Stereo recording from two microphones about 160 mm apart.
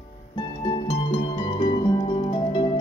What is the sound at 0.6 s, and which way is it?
Music, 30° left (ahead or behind).